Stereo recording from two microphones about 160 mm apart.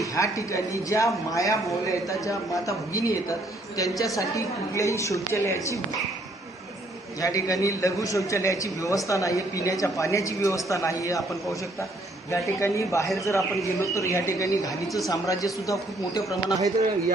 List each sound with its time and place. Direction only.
0.0 s a man's voice: 20° left (ahead or behind)
7.2 s a man's voice: 20° left (ahead or behind)
12.3 s a man's voice: 20° left (ahead or behind)